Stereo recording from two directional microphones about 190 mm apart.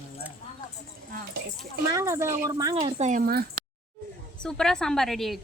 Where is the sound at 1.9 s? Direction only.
15° right (ahead or behind).